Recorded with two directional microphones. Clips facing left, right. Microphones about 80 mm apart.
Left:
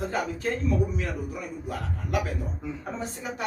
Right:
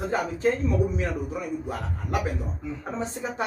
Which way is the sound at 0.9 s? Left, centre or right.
Right.